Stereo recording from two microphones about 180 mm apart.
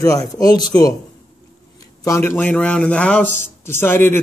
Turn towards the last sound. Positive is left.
turn(degrees=10)  # may be behind; listen again after turning